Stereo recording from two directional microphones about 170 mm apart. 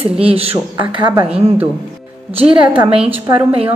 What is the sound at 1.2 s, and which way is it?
Speech, 10° right (ahead or behind).